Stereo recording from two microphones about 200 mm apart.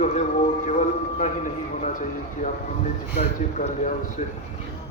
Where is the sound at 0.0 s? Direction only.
40° left (ahead or behind).